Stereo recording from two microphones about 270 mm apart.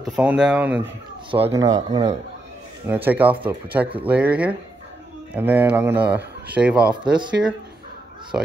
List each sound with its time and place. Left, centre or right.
0.0 s speech: centre
1.3 s speech: centre